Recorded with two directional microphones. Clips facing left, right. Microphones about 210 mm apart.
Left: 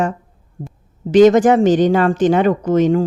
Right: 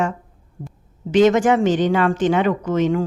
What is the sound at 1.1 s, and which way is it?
Speech, 40° left (ahead or behind).